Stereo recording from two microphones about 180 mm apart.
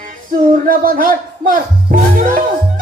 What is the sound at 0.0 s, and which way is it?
Music, 50° right (ahead or behind).